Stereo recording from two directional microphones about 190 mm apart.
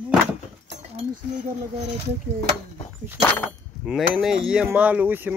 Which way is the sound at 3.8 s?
5° right (ahead or behind).